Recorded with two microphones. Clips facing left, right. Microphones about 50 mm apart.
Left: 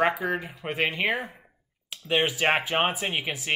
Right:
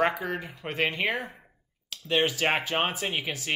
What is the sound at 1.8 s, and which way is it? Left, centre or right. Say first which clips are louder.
Speech: left 1 dB; centre.